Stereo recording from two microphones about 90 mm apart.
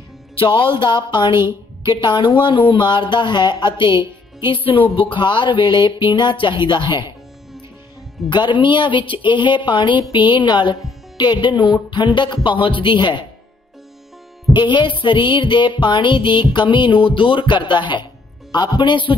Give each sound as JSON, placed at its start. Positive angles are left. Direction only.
{"t": 0.4, "sound": "a woman's voice", "side_deg": 70}
{"t": 3.9, "sound": "music", "side_deg": -25}
{"t": 4.5, "sound": "speech", "side_deg": 80}
{"t": 5.1, "sound": "a woman's voice", "side_deg": 60}
{"t": 8.3, "sound": "a woman's voice", "side_deg": 60}
{"t": 14.5, "sound": "a woman's voice", "side_deg": 60}